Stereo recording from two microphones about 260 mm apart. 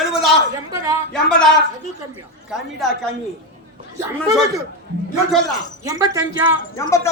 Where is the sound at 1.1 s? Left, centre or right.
Centre.